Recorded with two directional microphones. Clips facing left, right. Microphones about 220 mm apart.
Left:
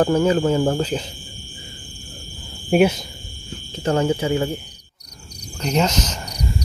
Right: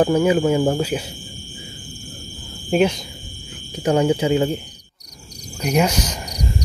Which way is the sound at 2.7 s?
10° left (ahead or behind).